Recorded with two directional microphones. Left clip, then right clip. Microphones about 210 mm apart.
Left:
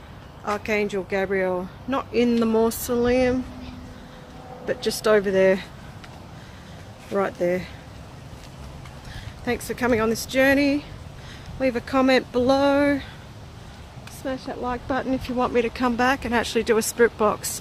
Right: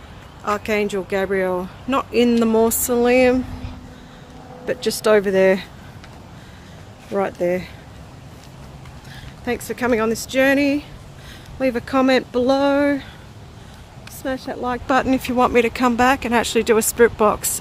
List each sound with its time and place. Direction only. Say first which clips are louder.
0.5 s speech: right 4 dB; 15° right (ahead or behind)
4.6 s speech: right 4 dB; 20° right (ahead or behind)
7.1 s speech: right 3 dB; 10° right (ahead or behind)
9.4 s speech: right 2 dB; 10° right (ahead or behind)
14.2 s speech: right 4 dB; 30° right (ahead or behind); by 17.5 s 15° right (ahead or behind)